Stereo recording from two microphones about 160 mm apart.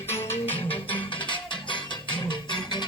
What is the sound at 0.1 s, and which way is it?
Music, 15° left (ahead or behind).